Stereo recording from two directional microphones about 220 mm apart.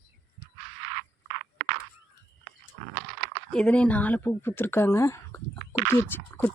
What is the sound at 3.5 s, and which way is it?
Speech, 5° left (ahead or behind).